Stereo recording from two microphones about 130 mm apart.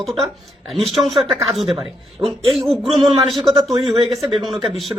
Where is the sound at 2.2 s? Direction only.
20° right (ahead or behind).